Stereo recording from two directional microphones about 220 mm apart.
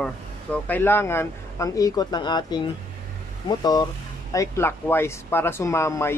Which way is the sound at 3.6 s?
20° left (ahead or behind).